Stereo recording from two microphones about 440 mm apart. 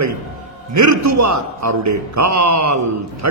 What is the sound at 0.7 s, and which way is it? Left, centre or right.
A man's voice, right.